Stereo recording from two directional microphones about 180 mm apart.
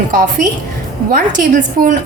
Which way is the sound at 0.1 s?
45° right (ahead or behind).